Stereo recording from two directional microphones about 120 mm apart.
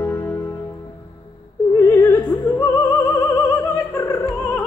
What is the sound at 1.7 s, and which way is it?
Opera, 20° left (ahead or behind).